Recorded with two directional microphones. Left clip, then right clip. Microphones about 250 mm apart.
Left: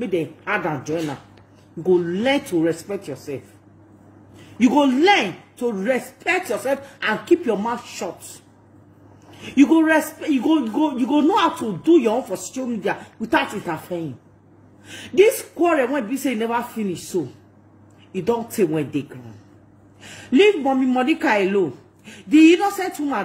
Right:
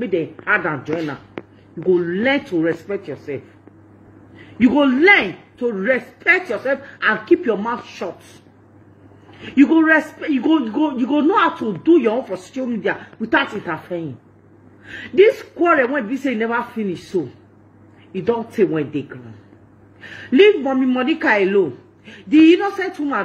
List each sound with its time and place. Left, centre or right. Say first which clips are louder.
0.2 s speech: right 5 dB; centre
4.6 s speech: right 2 dB; centre
9.3 s speech: right 2 dB; centre
15.5 s a woman's voice: right 3 dB; centre